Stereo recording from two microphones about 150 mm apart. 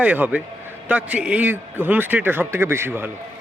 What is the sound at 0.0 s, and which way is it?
A man's voice, 10° right (ahead or behind).